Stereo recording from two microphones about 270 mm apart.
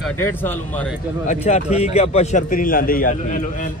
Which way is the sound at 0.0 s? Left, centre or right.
Centre.